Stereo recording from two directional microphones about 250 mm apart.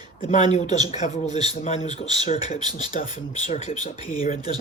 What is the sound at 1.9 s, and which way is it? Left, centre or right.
Speech, centre.